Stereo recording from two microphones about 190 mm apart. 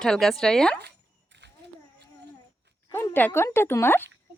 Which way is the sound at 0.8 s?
65° right (ahead or behind).